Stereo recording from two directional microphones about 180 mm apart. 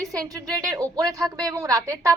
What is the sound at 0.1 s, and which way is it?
Speech, 20° right (ahead or behind).